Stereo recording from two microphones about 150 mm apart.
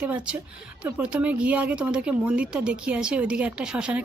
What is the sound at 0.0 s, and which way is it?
Speech, 5° right (ahead or behind).